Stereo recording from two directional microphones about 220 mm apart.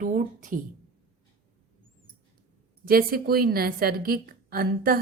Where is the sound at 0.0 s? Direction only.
35° right (ahead or behind).